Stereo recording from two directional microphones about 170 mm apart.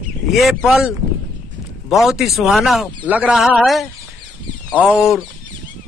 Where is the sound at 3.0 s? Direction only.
10° right (ahead or behind).